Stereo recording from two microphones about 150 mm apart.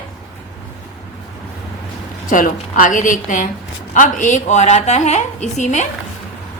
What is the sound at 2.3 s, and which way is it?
A woman's voice, 65° left (ahead or behind).